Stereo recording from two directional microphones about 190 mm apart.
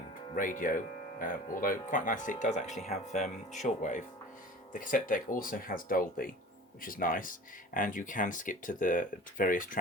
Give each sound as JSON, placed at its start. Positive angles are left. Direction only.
{"t": 0.1, "sound": "speech", "side_deg": 45}